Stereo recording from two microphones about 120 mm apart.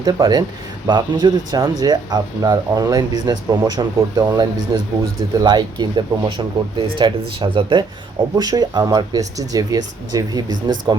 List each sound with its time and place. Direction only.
0.0 s speech: 35° right (ahead or behind)
8.4 s speech: 35° right (ahead or behind)